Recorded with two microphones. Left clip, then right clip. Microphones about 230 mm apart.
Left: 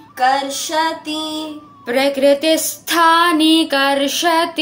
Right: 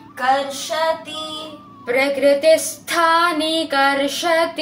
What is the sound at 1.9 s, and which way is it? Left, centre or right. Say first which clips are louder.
Female singing: left 2 dB; left.